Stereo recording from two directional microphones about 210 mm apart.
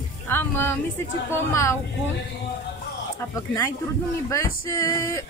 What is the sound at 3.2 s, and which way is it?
Speech, 15° left (ahead or behind).